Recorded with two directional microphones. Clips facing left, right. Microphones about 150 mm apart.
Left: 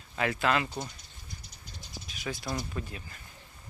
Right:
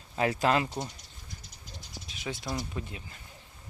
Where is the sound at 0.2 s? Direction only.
35° right (ahead or behind).